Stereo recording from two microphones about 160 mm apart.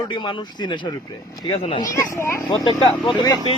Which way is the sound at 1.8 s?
20° left (ahead or behind).